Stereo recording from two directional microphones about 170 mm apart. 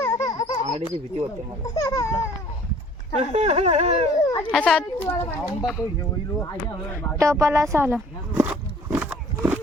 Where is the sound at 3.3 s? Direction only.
40° right (ahead or behind).